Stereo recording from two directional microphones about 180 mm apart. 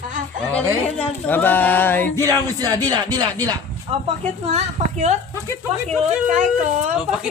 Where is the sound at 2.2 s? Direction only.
20° right (ahead or behind).